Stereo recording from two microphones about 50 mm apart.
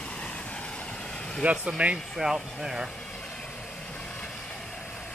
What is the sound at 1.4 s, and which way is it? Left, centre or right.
Speech, right.